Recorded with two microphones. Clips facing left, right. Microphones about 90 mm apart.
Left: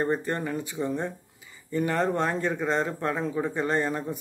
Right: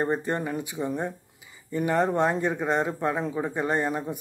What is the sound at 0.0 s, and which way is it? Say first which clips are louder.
Speech: right 1 dB; 20° right (ahead or behind).